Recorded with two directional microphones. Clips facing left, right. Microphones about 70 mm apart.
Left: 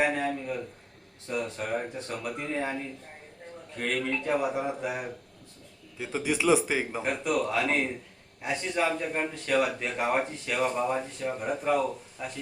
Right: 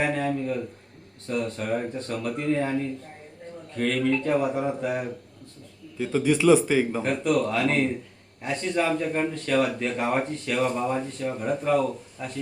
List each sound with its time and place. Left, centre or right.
0.0 s speech: centre